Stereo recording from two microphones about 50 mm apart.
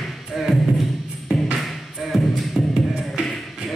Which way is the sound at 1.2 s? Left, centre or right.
Centre.